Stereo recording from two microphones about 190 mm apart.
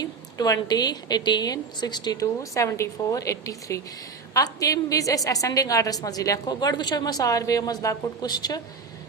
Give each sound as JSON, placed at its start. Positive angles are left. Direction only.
{"t": 0.0, "sound": "a woman's voice", "side_deg": 20}